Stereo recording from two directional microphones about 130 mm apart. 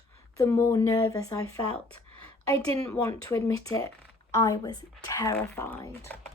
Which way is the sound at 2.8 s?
25° left (ahead or behind).